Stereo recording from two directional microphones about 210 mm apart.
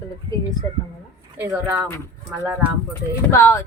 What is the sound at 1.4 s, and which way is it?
Speech, 10° right (ahead or behind).